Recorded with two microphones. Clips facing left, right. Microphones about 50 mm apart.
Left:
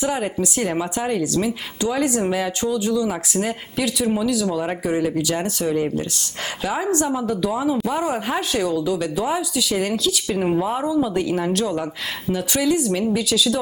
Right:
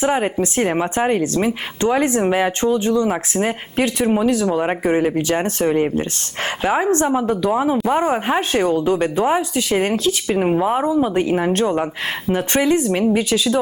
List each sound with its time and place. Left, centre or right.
0.0 s speech: right